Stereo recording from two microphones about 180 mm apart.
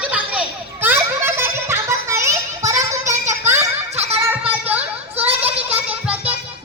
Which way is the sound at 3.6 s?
35° right (ahead or behind).